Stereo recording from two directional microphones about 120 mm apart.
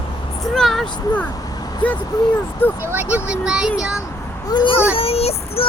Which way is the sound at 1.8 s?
10° left (ahead or behind).